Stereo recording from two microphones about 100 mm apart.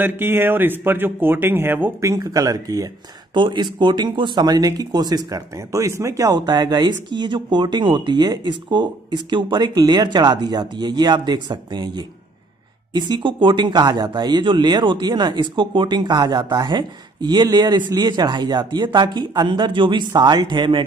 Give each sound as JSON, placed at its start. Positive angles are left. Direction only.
{"t": 0.0, "sound": "speech", "side_deg": -20}
{"t": 2.0, "sound": "speech", "side_deg": -35}
{"t": 3.3, "sound": "speech", "side_deg": -50}